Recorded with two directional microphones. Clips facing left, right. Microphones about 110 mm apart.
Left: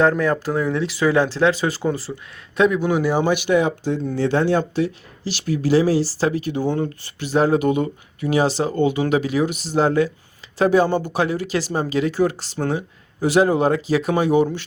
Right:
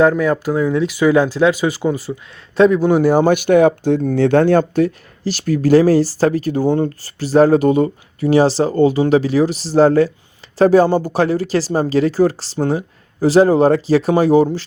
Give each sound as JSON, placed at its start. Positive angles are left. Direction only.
{"t": 0.2, "sound": "speech", "side_deg": -15}
{"t": 2.6, "sound": "speech", "side_deg": -30}